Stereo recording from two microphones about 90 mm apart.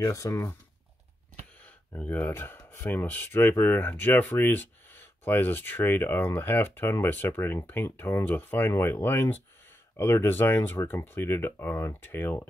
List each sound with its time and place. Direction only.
0.0 s speech: 35° left (ahead or behind)
2.0 s speech: 20° left (ahead or behind)